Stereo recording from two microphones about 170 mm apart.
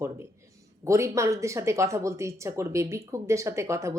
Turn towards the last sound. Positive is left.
turn(degrees=-15)  # may be behind; listen again after turning